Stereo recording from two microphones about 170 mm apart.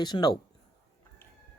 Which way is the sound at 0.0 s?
25° left (ahead or behind).